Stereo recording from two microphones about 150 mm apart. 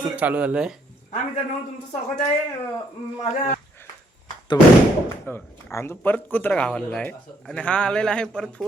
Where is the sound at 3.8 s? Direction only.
15° left (ahead or behind).